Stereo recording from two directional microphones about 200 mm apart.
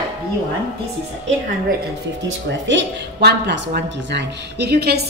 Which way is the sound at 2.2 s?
65° right (ahead or behind).